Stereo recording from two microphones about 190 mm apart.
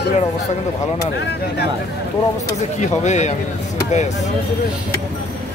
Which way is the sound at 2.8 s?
40° left (ahead or behind).